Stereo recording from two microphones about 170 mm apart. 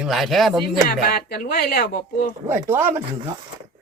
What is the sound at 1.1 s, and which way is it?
Speech, 60° left (ahead or behind).